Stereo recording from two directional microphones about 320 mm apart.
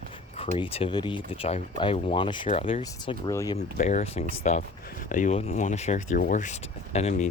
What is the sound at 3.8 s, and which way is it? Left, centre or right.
Speech, left.